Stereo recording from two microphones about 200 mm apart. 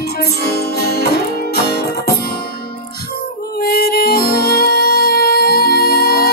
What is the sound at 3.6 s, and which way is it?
Music, 50° left (ahead or behind).